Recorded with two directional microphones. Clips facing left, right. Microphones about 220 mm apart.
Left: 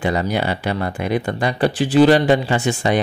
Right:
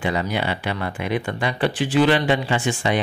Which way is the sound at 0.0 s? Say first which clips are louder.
Left 3 dB; 40° left (ahead or behind).